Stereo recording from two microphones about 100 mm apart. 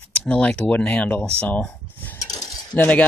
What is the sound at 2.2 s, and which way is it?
Cutlery, 40° left (ahead or behind).